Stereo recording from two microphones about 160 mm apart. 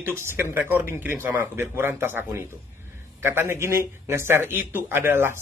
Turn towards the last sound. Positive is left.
turn(degrees=-15)  # may be behind; listen again after turning